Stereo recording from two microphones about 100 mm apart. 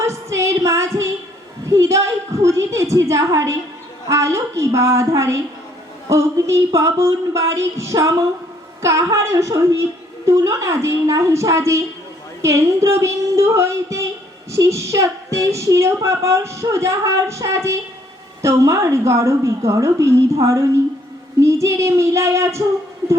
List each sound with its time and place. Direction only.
0.0 s music: 30° right (ahead or behind)
1.7 s a woman's voice: 30° right (ahead or behind)